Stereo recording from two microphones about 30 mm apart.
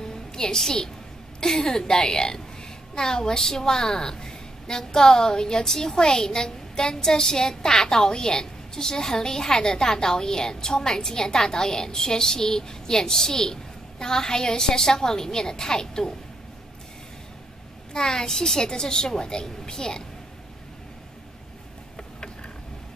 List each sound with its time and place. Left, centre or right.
0.1 s a sound: left
1.4 s a woman's voice: centre
17.9 s a woman's voice: left
21.9 s tick-tock: left